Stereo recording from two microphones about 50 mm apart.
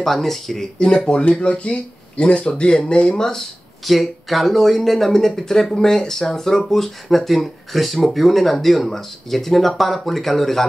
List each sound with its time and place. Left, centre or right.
0.0 s speech: centre
3.8 s speech: centre